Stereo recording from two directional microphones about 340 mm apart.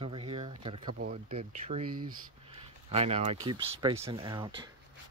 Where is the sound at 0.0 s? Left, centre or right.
Centre.